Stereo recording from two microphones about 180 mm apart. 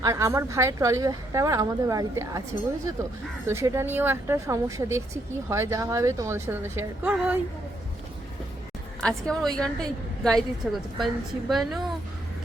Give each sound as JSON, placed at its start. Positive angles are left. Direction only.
{"t": 0.0, "sound": "speech", "side_deg": -15}
{"t": 9.0, "sound": "a woman's voice", "side_deg": 5}